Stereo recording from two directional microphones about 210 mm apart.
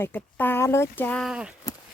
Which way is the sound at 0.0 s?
10° left (ahead or behind).